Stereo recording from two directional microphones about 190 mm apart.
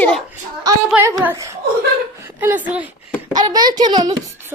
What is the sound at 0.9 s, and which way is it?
A woman's voice, 15° right (ahead or behind).